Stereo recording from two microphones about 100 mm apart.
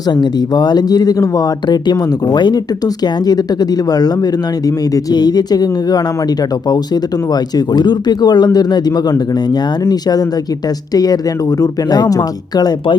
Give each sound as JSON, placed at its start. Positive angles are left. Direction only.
{"t": 0.1, "sound": "speech", "side_deg": 45}
{"t": 7.5, "sound": "speech", "side_deg": 45}